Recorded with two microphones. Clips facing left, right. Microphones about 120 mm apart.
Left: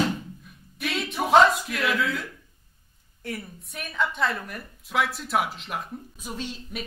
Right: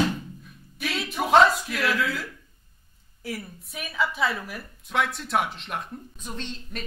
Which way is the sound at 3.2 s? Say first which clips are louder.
Even; centre (ahead or behind).